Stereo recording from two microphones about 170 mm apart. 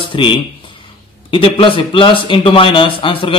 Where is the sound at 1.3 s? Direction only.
30° left (ahead or behind).